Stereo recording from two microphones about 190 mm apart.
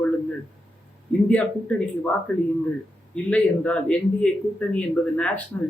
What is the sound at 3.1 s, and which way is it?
Speech, 5° left (ahead or behind).